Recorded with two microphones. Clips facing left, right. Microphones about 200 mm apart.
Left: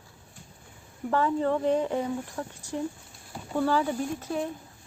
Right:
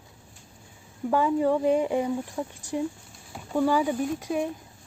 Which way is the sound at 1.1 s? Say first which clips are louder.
Right 3 dB; 10° right (ahead or behind).